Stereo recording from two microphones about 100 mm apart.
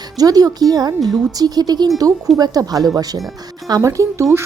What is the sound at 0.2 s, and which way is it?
A woman's voice, 40° right (ahead or behind).